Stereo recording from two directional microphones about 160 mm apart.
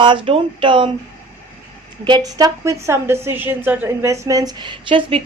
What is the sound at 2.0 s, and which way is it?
A woman's voice, 25° right (ahead or behind).